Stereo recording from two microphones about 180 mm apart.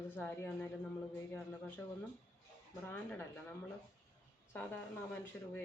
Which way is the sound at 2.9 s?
10° left (ahead or behind).